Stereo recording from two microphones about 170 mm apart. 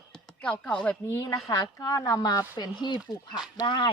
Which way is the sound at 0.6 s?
5° left (ahead or behind).